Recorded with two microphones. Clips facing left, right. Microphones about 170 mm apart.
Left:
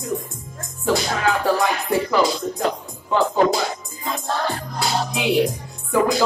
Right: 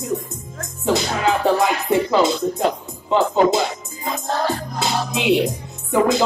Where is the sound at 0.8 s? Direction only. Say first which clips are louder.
Right 1 dB; 20° right (ahead or behind).